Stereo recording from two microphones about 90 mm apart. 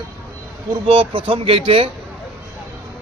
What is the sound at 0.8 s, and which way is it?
Speech, 85° right.